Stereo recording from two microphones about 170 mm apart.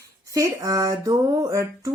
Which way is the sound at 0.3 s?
20° right (ahead or behind).